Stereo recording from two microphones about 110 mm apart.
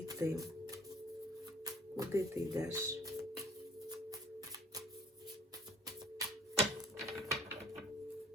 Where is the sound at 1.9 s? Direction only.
30° right (ahead or behind).